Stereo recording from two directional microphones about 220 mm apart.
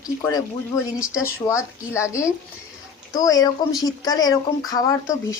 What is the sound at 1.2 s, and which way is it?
A man's voice, 10° left (ahead or behind).